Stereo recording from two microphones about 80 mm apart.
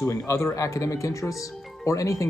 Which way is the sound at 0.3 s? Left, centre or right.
Left.